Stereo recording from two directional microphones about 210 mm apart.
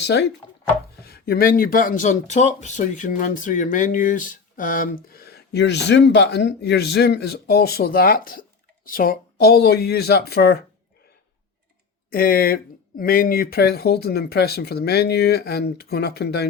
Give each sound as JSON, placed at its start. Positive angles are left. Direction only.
{"t": 0.0, "sound": "speech", "side_deg": 55}
{"t": 12.1, "sound": "speech", "side_deg": 45}